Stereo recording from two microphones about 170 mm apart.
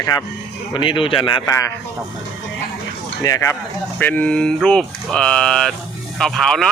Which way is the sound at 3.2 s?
20° left (ahead or behind).